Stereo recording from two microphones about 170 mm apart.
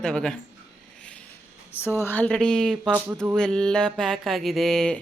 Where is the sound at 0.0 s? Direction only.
5° left (ahead or behind).